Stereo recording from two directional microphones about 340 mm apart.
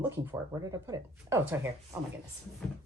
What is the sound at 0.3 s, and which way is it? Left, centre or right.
Speech, centre.